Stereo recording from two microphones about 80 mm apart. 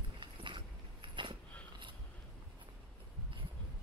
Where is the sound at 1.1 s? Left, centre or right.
Right.